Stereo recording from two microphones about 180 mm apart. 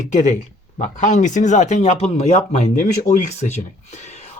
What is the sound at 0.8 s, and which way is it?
Speech, 45° left (ahead or behind).